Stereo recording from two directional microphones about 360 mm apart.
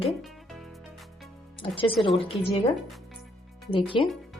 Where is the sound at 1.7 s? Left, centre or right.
Centre.